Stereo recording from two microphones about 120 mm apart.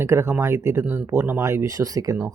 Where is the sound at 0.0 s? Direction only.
20° right (ahead or behind).